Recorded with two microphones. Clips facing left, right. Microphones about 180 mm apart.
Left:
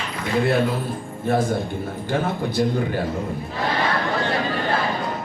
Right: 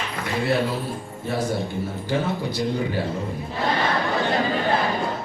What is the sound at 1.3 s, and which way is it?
Speech, 50° left (ahead or behind).